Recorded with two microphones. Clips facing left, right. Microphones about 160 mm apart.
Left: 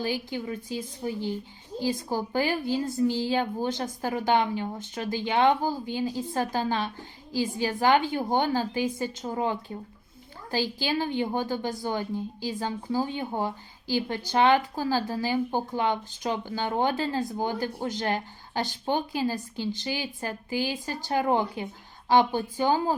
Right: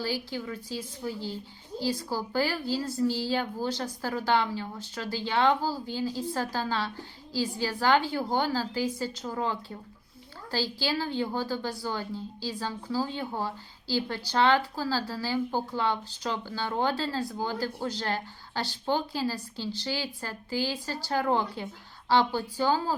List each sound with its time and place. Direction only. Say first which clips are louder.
0.0 s a woman's voice: left 2 dB; 20° left (ahead or behind)